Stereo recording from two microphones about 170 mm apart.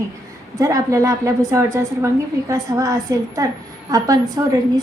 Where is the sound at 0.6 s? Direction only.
20° right (ahead or behind).